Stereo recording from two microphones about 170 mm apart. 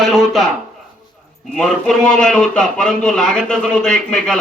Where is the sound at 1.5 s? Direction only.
5° left (ahead or behind).